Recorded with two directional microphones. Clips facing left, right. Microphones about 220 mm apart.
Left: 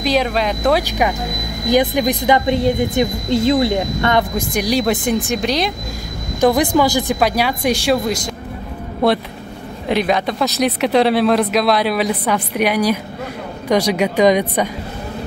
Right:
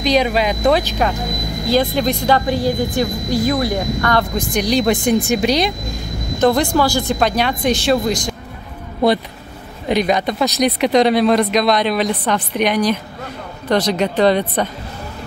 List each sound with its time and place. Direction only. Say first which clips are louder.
0.0 s speech: right 1 dB; centre (ahead or behind)
0.8 s a woman's voice: even; 15° left (ahead or behind)
4.4 s speech: right 1 dB; 10° left (ahead or behind)
6.4 s speech: left 1 dB; 15° left (ahead or behind)
9.8 s speech: right 1 dB; centre (ahead or behind)